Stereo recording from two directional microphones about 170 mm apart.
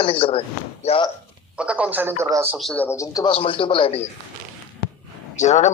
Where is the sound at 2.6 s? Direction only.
5° left (ahead or behind).